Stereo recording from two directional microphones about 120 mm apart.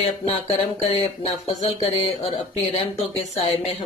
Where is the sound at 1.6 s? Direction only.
55° left (ahead or behind).